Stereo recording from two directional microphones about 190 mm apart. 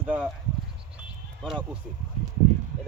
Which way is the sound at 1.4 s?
Centre (ahead or behind).